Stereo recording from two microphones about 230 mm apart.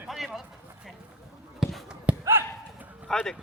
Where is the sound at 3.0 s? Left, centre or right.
Centre.